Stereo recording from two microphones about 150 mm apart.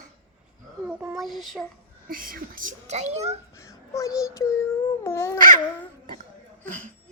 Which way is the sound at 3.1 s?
45° right (ahead or behind).